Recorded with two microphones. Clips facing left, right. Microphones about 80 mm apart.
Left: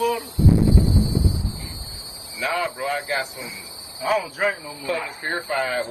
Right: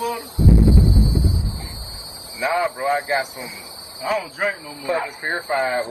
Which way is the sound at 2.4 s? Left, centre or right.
Right.